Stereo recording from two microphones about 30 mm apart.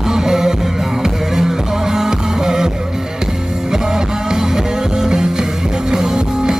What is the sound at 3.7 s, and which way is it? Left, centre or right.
Music, centre.